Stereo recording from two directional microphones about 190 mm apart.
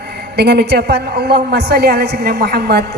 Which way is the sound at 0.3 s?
60° right (ahead or behind).